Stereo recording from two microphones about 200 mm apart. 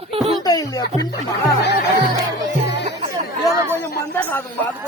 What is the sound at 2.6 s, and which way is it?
Music, 60° left (ahead or behind).